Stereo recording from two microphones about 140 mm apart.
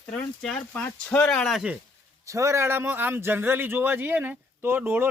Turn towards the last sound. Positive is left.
turn(degrees=-15)  # may be behind; listen again after turning